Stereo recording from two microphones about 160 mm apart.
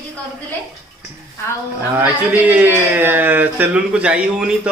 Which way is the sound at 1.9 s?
10° right (ahead or behind).